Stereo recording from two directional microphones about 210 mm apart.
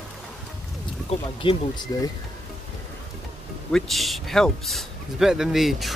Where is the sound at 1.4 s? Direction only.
25° left (ahead or behind).